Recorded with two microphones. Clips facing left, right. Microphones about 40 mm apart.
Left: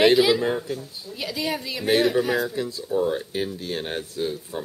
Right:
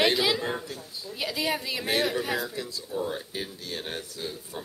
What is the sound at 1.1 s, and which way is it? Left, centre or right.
Speech, centre.